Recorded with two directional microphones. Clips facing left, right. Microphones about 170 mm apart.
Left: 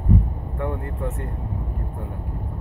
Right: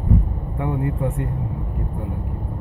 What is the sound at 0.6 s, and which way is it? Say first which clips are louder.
Speech: right 5 dB; 15° right (ahead or behind).